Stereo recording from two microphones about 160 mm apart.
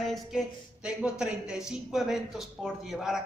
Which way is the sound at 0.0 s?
Centre (ahead or behind).